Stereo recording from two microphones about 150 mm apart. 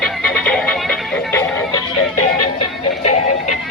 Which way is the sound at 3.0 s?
50° left (ahead or behind).